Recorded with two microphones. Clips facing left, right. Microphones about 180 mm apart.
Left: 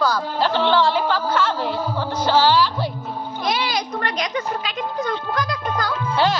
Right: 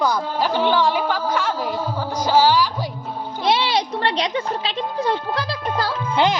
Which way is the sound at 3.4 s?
30° right (ahead or behind).